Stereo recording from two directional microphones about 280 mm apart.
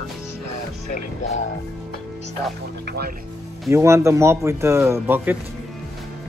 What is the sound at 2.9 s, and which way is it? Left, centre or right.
Speech, right.